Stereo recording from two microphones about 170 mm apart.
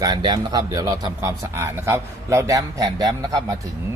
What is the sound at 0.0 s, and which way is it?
A man's voice, 25° right (ahead or behind).